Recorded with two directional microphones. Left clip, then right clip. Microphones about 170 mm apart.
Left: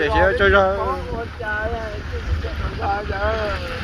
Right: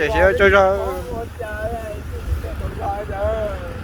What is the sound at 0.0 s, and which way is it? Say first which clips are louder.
Speech: right 2 dB; 65° right (ahead or behind).